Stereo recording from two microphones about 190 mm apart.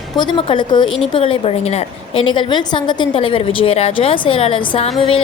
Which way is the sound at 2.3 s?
25° left (ahead or behind).